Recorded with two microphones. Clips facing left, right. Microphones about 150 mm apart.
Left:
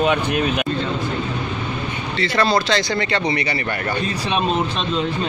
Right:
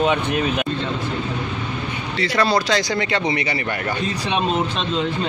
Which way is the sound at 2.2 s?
10° right (ahead or behind).